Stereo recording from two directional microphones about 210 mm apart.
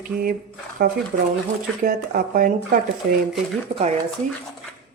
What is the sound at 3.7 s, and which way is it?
Speech, 30° right (ahead or behind).